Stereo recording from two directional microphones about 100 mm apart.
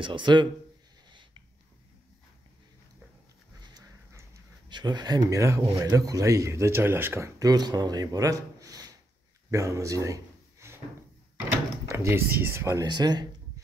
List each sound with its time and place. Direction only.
0.0 s speech: 50° right (ahead or behind)
4.6 s speech: 50° right (ahead or behind)
9.5 s a sound: 30° right (ahead or behind)
11.9 s speech: 25° right (ahead or behind)
12.8 s speech: 45° right (ahead or behind)